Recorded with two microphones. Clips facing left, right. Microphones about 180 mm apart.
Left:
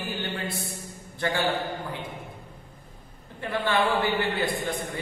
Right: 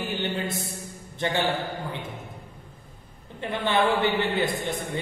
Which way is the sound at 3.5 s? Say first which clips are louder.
Right 1 dB; 20° right (ahead or behind).